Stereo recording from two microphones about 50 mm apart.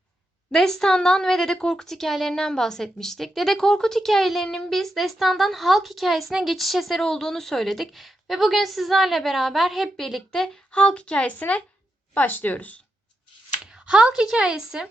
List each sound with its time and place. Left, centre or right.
0.5 s a woman's voice: centre
7.0 s a woman's voice: centre
10.7 s a woman's voice: left
13.7 s speech: centre